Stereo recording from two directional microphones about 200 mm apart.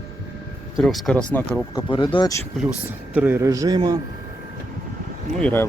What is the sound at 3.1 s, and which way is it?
Speech, 10° right (ahead or behind).